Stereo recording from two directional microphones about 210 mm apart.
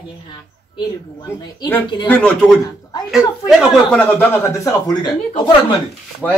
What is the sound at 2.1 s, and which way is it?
A man's voice, 5° left (ahead or behind).